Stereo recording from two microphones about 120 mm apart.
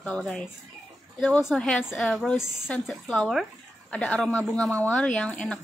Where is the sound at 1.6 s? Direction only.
10° left (ahead or behind).